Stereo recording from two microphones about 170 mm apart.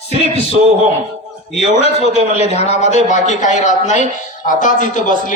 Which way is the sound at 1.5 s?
40° left (ahead or behind).